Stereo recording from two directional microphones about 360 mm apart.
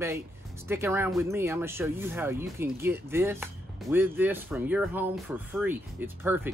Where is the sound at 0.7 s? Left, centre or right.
Centre.